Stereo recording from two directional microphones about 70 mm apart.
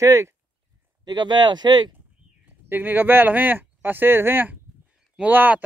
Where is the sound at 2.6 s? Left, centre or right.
Right.